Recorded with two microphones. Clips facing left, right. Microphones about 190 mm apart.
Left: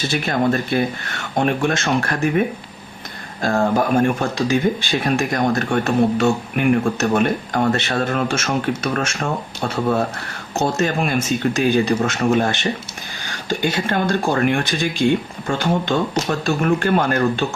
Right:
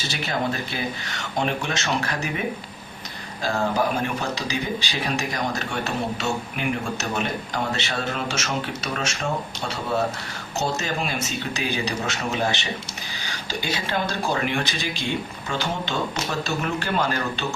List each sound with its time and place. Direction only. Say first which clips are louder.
0.1 s speech: left 7 dB; 55° left (ahead or behind)
3.4 s speech: left 5 dB; 50° left (ahead or behind)